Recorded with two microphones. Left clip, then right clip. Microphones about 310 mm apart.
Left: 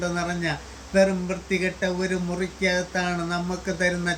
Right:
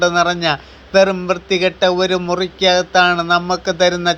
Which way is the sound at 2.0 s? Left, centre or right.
Right.